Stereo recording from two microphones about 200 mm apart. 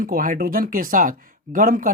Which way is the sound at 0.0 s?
45° right (ahead or behind).